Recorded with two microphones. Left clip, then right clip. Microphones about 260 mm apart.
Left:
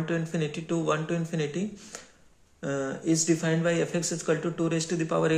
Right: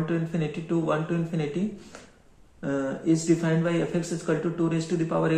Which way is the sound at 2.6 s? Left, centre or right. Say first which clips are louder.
Right 2 dB; left.